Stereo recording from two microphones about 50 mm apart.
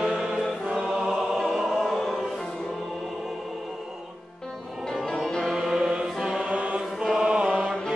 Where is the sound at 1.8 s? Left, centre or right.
Centre.